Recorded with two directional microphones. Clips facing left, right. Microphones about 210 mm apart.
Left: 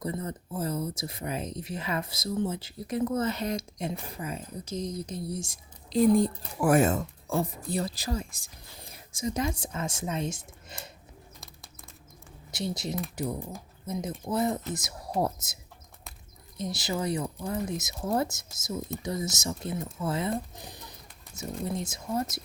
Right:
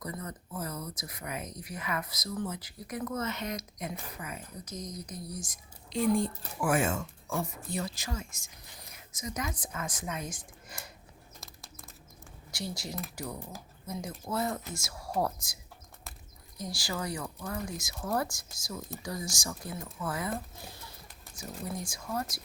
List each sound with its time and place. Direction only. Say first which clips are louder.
0.0 s speech: left 6 dB; 30° left (ahead or behind)
11.3 s a sound: even; centre (ahead or behind)
12.5 s speech: left 6 dB; 20° left (ahead or behind)
16.6 s speech: left 5 dB; 20° left (ahead or behind)
20.6 s music: left 2 dB; 20° left (ahead or behind)
21.6 s speech: left 5 dB; 25° left (ahead or behind)